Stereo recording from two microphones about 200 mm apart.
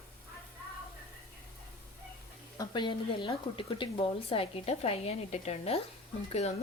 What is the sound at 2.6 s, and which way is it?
A woman's voice, 20° left (ahead or behind).